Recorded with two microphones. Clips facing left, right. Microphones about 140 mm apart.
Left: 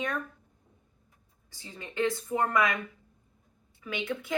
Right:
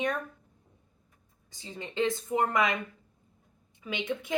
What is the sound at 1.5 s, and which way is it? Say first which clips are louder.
A woman's voice: right 1 dB; 20° right (ahead or behind).